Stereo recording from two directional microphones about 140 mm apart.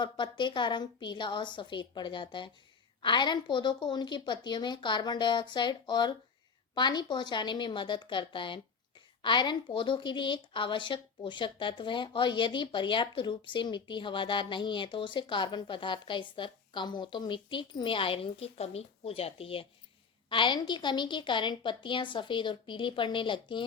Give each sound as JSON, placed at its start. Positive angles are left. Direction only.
{"t": 0.0, "sound": "a woman's voice", "side_deg": 35}